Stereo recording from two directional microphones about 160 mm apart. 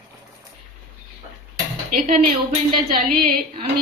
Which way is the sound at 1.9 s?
60° right (ahead or behind).